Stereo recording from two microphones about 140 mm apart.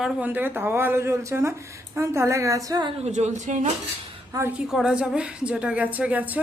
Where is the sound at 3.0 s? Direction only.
55° right (ahead or behind).